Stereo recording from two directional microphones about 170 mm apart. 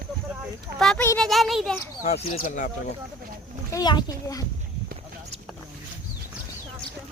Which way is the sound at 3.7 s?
25° left (ahead or behind).